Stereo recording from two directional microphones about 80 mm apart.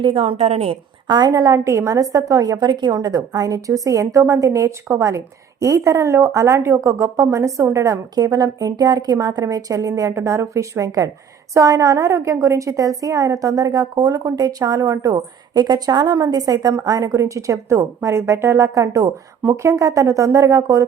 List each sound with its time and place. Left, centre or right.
1.0 s a woman's voice: right
1.3 s a woman's voice: right
8.1 s a woman's voice: right
15.1 s a woman's voice: right